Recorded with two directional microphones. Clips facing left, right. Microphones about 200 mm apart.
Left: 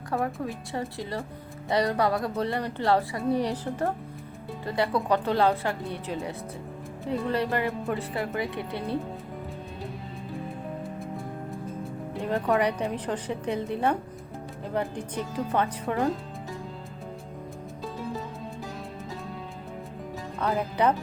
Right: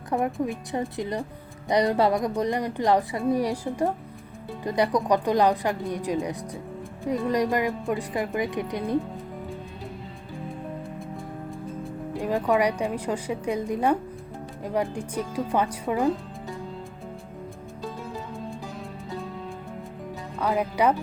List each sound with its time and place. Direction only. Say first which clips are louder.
0.1 s a woman's voice: right 4 dB; 20° right (ahead or behind)
12.2 s a woman's voice: right 2 dB; 10° right (ahead or behind)
20.4 s a woman's voice: right 2 dB; 10° right (ahead or behind)